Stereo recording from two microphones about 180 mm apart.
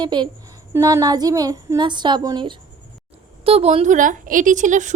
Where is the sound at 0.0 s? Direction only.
25° right (ahead or behind).